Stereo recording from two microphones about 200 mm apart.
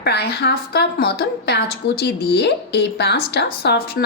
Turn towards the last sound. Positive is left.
turn(degrees=50)  # may be behind; listen again after turning